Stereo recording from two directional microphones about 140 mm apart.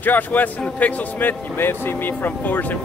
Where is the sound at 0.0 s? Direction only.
10° left (ahead or behind).